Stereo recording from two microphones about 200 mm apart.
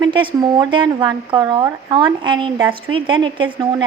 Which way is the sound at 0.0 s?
25° right (ahead or behind).